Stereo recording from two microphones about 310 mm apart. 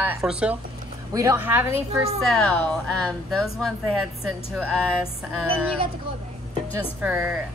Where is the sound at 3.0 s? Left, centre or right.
Centre.